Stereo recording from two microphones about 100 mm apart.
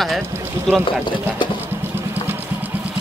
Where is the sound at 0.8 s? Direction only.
55° left (ahead or behind).